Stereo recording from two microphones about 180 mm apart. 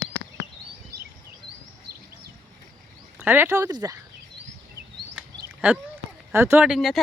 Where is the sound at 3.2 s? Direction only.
10° right (ahead or behind).